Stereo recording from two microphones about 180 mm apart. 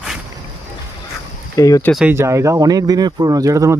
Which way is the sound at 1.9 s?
10° right (ahead or behind).